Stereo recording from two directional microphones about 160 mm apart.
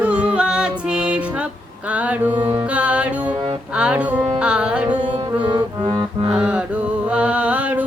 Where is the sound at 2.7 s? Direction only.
10° right (ahead or behind).